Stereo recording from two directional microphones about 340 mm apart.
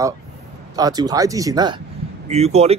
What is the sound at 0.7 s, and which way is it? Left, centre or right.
A man's voice, centre.